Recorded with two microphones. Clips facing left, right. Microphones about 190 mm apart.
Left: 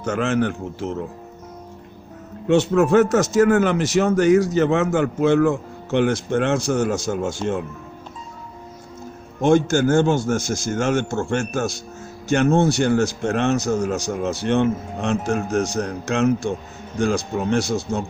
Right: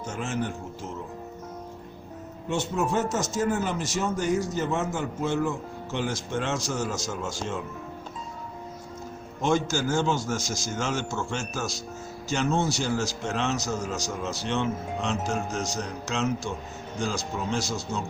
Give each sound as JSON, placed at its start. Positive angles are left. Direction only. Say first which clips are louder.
{"t": 0.0, "sound": "a man's voice", "louder": "left 10 dB", "side_deg": 75}
{"t": 2.5, "sound": "a man's voice", "louder": "left 11 dB", "side_deg": 70}
{"t": 9.4, "sound": "speech", "louder": "left 9 dB", "side_deg": 55}